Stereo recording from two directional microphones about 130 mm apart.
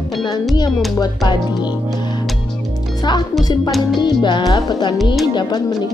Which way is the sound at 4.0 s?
35° left (ahead or behind).